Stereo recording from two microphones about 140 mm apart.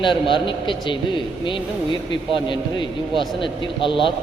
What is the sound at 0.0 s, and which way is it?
A man's voice, 35° left (ahead or behind).